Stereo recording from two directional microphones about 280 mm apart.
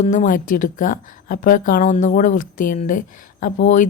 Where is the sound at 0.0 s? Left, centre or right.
Left.